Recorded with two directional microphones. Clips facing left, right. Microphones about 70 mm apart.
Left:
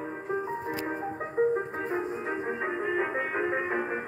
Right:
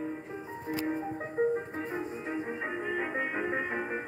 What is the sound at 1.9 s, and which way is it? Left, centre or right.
Music, left.